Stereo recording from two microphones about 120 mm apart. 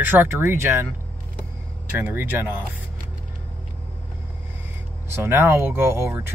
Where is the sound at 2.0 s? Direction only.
15° right (ahead or behind).